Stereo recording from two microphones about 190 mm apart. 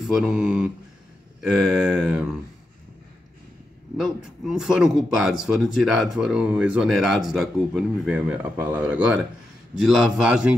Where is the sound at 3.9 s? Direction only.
Centre (ahead or behind).